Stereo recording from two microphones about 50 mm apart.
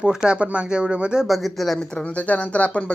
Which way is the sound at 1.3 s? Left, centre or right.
Centre.